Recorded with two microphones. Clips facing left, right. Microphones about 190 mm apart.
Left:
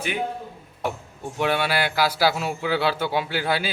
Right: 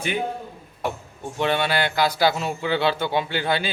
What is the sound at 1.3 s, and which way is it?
A man's voice, 5° left (ahead or behind).